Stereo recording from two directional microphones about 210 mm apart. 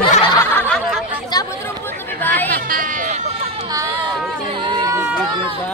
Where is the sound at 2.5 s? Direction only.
40° right (ahead or behind).